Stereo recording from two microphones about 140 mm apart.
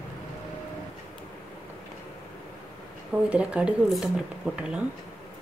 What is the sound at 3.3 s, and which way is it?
Speech, 10° right (ahead or behind).